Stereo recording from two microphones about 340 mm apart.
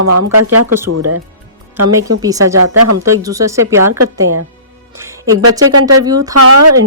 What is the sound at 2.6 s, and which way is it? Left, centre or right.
Speech, right.